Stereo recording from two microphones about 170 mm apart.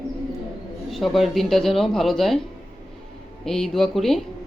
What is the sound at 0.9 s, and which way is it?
Speech, centre (ahead or behind).